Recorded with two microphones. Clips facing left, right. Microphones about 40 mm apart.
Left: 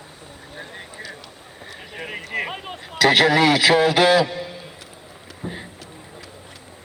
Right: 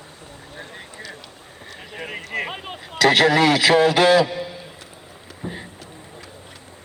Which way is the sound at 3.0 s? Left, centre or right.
Left.